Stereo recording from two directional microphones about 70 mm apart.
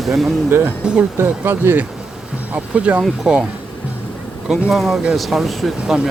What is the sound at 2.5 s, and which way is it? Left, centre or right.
Speech, centre.